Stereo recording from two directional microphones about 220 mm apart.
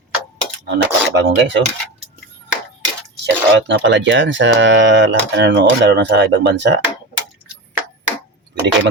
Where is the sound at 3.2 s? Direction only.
55° right (ahead or behind).